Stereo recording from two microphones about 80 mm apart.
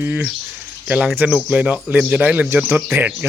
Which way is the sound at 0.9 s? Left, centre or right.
Centre.